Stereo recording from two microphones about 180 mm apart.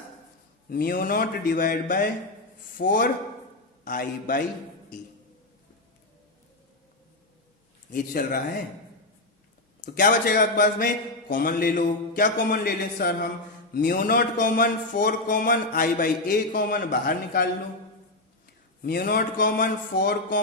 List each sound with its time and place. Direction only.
0.7 s speech: 55° left (ahead or behind)
7.9 s speech: 50° left (ahead or behind)
9.8 s speech: 50° left (ahead or behind)
18.8 s speech: 55° left (ahead or behind)